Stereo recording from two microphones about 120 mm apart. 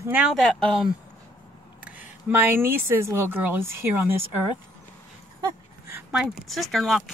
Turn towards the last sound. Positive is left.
turn(degrees=0)  # may be behind; listen again after turning